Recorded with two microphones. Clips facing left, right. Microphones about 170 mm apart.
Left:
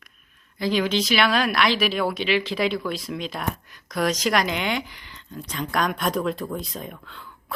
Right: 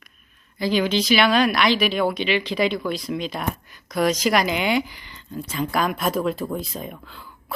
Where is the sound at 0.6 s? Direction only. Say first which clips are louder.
Right 2 dB; centre (ahead or behind).